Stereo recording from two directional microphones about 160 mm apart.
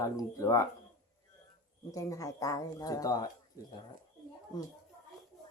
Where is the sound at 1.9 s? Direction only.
20° left (ahead or behind).